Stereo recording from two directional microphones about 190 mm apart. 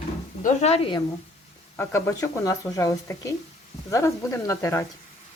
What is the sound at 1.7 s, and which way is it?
Speech, 15° left (ahead or behind).